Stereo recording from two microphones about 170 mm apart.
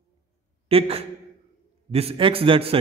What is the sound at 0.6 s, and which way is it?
A man's voice, 35° right (ahead or behind).